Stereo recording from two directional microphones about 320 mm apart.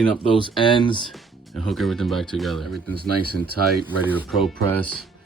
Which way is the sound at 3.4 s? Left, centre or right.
Right.